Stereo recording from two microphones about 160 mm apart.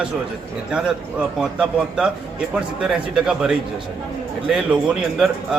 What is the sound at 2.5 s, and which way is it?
A man's voice, 5° right (ahead or behind).